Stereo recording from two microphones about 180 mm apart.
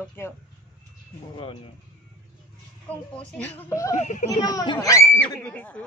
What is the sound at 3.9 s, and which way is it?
Speech, 40° left (ahead or behind).